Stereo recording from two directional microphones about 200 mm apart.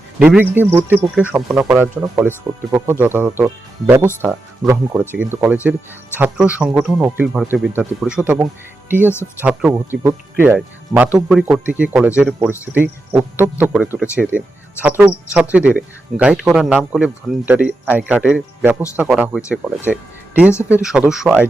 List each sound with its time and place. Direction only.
0.2 s speech: 5° right (ahead or behind)